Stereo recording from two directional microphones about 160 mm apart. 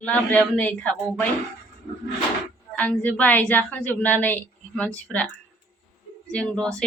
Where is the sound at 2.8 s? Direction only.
10° left (ahead or behind).